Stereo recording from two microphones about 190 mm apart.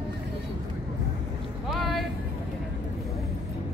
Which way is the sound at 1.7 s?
Centre (ahead or behind).